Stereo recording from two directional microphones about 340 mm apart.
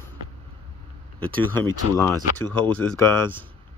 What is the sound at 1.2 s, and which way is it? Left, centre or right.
Speech, centre.